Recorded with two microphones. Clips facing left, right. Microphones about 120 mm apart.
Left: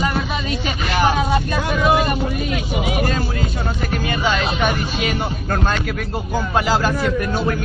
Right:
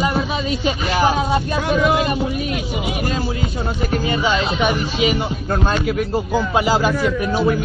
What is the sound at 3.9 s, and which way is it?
Speech, 30° right (ahead or behind).